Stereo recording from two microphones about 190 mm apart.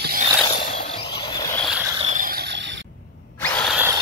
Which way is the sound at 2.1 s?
50° right (ahead or behind).